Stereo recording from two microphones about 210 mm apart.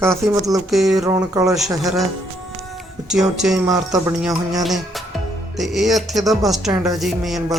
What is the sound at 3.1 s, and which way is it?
Speech, centre (ahead or behind).